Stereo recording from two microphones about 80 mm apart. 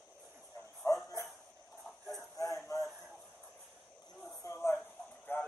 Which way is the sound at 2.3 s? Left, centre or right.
Left.